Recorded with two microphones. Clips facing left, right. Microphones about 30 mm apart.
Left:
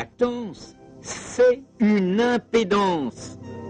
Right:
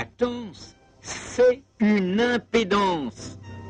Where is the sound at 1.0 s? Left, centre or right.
Centre.